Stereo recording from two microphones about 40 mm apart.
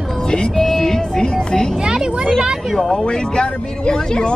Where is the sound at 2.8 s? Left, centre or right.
Centre.